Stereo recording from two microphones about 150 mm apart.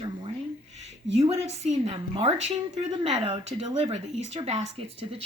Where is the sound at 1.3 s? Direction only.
45° right (ahead or behind).